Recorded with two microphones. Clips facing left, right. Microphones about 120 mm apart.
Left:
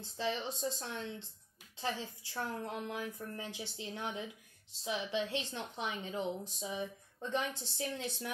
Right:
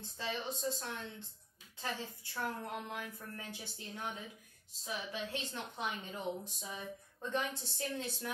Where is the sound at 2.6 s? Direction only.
20° left (ahead or behind).